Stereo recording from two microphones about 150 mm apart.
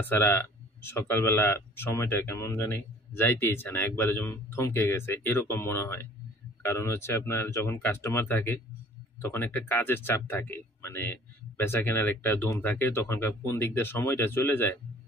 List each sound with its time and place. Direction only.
0.0 s speech: 15° left (ahead or behind)